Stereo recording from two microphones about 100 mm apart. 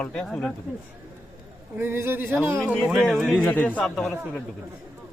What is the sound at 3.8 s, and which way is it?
Speech, centre (ahead or behind).